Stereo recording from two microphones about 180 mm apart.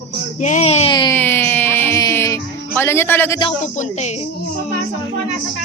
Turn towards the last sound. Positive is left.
turn(degrees=40)  # may be behind; listen again after turning